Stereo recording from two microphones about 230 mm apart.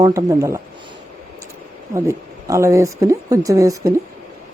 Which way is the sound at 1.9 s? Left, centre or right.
Centre.